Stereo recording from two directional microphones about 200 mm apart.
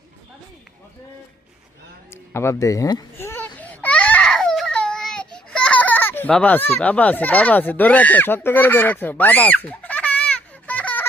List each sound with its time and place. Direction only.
2.0 s baby cry: 15° left (ahead or behind)